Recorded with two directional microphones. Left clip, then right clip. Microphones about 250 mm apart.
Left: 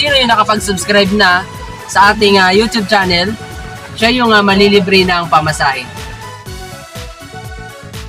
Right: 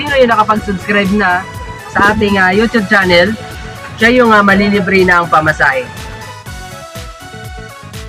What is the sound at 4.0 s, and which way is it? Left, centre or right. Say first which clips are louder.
Speech: right 2 dB; centre.